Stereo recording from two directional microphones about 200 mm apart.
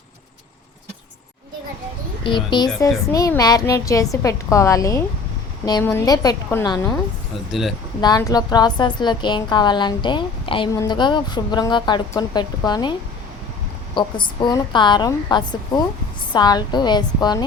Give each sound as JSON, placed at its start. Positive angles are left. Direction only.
{"t": 2.2, "sound": "a woman's voice", "side_deg": 25}
{"t": 8.0, "sound": "a woman's voice", "side_deg": 20}
{"t": 13.9, "sound": "a woman's voice", "side_deg": 20}